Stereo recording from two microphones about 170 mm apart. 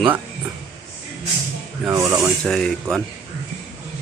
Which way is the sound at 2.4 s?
Centre (ahead or behind).